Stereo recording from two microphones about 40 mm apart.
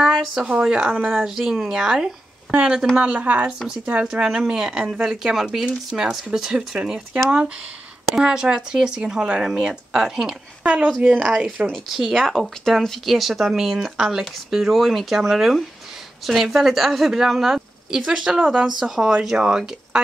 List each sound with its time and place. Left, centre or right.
0.5 s speech: right
0.9 s a woman's voice: right
1.2 s speech: centre; by 3.5 s right
4.0 s a woman's voice: centre
5.9 s speech: centre
7.2 s speech: right
10.6 s speech: right
11.2 s speech: centre
11.6 s a woman's voice: centre
18.4 s speech: right
18.8 s speech: centre